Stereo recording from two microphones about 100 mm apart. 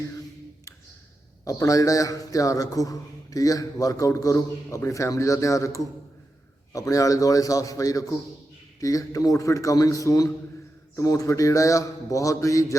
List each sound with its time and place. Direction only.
1.5 s a man's voice: 35° left (ahead or behind)